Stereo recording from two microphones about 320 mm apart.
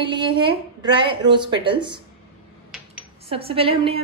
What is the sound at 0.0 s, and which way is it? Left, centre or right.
A woman's voice, centre.